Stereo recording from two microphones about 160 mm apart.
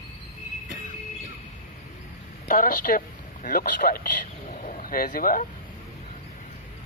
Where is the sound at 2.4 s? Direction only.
60° left (ahead or behind).